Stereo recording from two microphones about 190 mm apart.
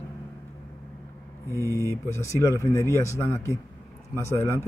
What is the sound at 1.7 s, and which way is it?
Speech, 15° right (ahead or behind).